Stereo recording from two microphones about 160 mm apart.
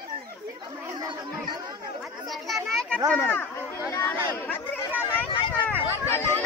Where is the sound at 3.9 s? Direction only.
15° left (ahead or behind).